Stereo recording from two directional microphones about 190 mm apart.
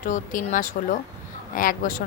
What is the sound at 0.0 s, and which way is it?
Speech, 45° left (ahead or behind).